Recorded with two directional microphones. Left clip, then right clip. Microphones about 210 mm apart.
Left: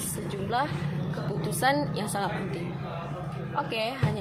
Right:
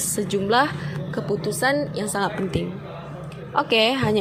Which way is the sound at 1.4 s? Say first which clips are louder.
Right 2 dB; 20° right (ahead or behind).